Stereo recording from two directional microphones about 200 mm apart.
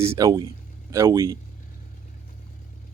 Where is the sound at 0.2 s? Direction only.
20° right (ahead or behind).